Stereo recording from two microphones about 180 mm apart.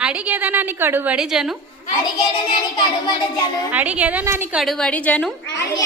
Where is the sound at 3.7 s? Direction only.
10° right (ahead or behind).